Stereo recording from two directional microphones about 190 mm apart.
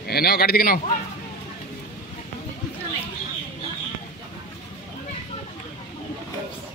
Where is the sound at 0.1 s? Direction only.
55° left (ahead or behind).